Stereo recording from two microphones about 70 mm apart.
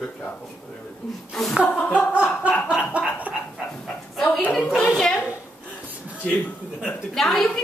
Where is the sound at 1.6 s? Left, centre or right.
Centre.